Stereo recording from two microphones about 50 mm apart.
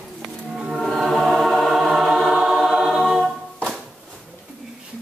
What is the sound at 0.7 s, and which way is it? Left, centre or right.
Choir, centre.